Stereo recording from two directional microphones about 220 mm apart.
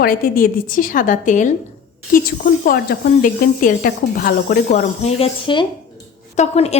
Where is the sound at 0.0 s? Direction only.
40° left (ahead or behind).